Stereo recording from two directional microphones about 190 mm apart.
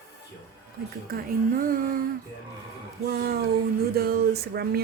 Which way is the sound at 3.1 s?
55° right (ahead or behind).